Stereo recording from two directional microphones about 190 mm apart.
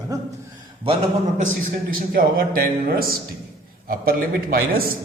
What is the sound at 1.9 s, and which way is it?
A man's voice, 50° right (ahead or behind).